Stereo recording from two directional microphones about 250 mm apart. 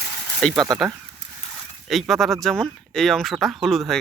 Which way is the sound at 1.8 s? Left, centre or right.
Centre.